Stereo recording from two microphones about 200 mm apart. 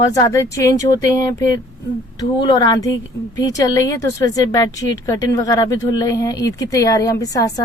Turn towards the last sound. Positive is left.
turn(degrees=15)  # may be behind; listen again after turning